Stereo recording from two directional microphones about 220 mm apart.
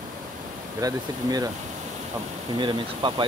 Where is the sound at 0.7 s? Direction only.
15° right (ahead or behind).